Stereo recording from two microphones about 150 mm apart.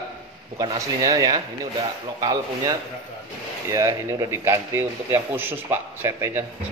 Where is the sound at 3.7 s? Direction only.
20° right (ahead or behind).